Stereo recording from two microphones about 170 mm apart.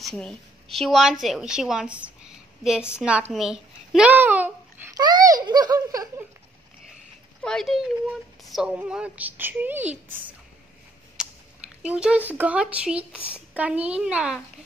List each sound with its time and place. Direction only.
0.0 s a woman's voice: 5° left (ahead or behind)
4.9 s speech: 20° right (ahead or behind)
7.4 s speech: centre (ahead or behind)
11.8 s speech: 5° right (ahead or behind)